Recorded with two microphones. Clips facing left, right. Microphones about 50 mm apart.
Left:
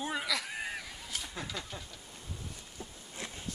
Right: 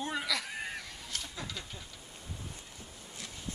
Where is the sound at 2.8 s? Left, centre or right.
Left.